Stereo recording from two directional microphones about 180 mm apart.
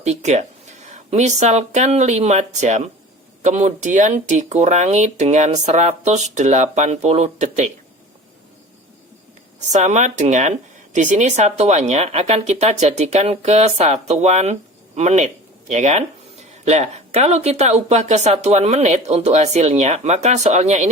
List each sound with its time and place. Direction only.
0.0 s speech: 40° right (ahead or behind)
9.6 s speech: 40° right (ahead or behind)